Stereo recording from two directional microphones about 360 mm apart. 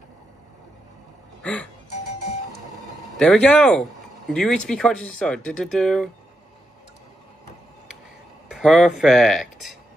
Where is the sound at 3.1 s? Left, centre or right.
Centre.